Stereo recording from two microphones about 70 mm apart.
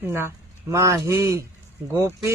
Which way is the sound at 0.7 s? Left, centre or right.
Right.